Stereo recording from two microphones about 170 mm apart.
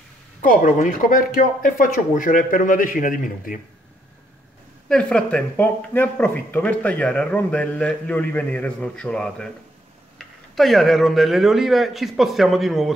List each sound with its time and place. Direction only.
0.4 s speech: 55° left (ahead or behind)
4.8 s speech: 5° left (ahead or behind)